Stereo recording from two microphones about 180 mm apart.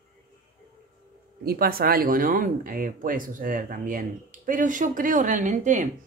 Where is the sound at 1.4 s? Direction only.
55° right (ahead or behind).